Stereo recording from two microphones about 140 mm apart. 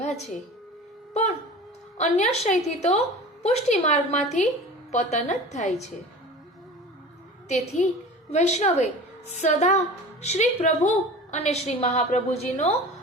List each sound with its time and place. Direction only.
2.0 s a woman's voice: 50° left (ahead or behind)
7.4 s a woman's voice: 55° left (ahead or behind)